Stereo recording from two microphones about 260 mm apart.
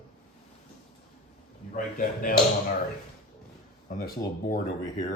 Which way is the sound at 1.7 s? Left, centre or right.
Left.